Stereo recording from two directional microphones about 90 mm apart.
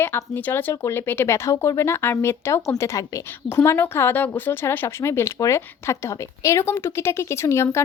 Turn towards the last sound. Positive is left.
turn(degrees=30)  # may be behind; listen again after turning